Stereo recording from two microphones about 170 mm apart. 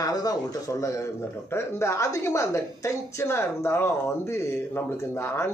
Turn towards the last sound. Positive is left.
turn(degrees=15)  # may be behind; listen again after turning